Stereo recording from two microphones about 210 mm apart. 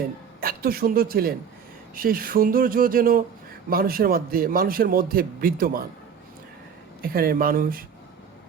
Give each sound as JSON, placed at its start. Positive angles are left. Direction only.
{"t": 0.4, "sound": "a man's voice", "side_deg": -45}
{"t": 7.0, "sound": "a man's voice", "side_deg": -45}